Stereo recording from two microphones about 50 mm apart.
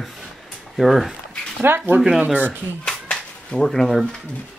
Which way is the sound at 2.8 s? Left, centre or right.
Centre.